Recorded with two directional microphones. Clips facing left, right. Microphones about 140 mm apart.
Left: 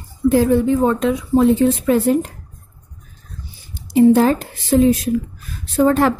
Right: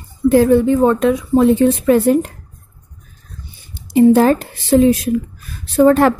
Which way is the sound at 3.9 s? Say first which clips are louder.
Right 2 dB; 65° right (ahead or behind).